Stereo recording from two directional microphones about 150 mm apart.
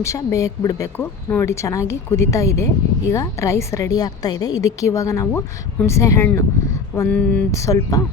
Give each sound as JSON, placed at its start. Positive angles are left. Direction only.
{"t": 0.0, "sound": "a woman's voice", "side_deg": 20}
{"t": 7.5, "sound": "a woman's voice", "side_deg": 20}